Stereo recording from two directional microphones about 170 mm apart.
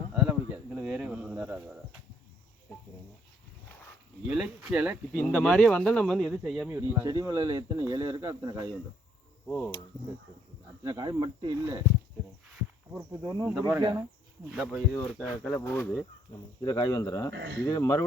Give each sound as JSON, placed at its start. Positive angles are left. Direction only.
{"t": 0.1, "sound": "cricket", "side_deg": -5}
{"t": 4.3, "sound": "speech", "side_deg": -5}
{"t": 5.1, "sound": "speech", "side_deg": 10}
{"t": 6.7, "sound": "speech", "side_deg": -15}
{"t": 9.5, "sound": "speech", "side_deg": 5}
{"t": 10.8, "sound": "speech", "side_deg": -20}
{"t": 13.2, "sound": "speech", "side_deg": -25}
{"t": 13.5, "sound": "speech", "side_deg": -5}
{"t": 15.6, "sound": "speech", "side_deg": 10}
{"t": 17.3, "sound": "speech", "side_deg": -90}
{"t": 17.6, "sound": "speech", "side_deg": 20}